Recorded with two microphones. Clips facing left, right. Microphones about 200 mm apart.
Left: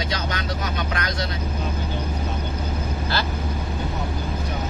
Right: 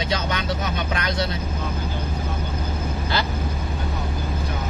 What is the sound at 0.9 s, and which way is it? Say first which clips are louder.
Speech: right 2 dB; 25° right (ahead or behind).